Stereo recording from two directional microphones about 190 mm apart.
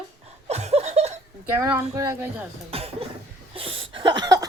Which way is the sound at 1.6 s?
10° right (ahead or behind).